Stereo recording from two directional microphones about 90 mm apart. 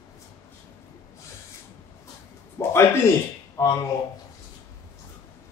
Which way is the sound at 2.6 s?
30° left (ahead or behind).